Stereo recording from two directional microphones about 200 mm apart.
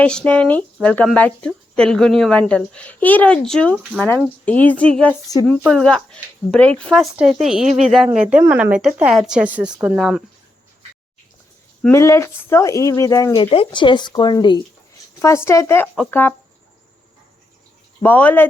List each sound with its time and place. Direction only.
0.0 s speech: 5° left (ahead or behind)
5.6 s speech: centre (ahead or behind)
11.8 s speech: 15° left (ahead or behind)
18.0 s speech: 10° left (ahead or behind)